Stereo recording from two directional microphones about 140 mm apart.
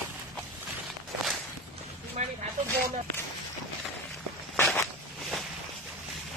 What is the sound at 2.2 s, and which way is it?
Snake, 55° right (ahead or behind).